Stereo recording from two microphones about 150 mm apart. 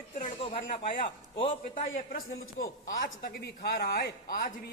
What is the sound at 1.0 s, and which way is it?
Speech, 35° left (ahead or behind).